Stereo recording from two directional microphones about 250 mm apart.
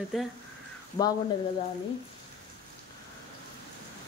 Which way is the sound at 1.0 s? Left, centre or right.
Centre.